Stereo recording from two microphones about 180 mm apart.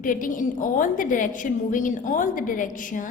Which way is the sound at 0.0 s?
50° left (ahead or behind).